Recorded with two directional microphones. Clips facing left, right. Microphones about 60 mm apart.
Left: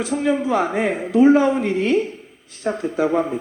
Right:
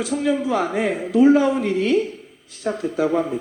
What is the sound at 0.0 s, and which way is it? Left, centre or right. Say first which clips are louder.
Speech: left 1 dB; left.